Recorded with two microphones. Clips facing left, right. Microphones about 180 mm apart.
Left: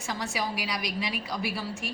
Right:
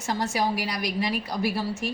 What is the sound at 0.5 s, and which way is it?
A woman's voice, 55° right (ahead or behind).